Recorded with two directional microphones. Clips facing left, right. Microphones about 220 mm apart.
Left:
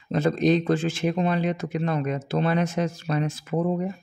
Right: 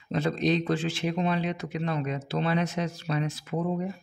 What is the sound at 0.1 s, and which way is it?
Speech, 50° left (ahead or behind).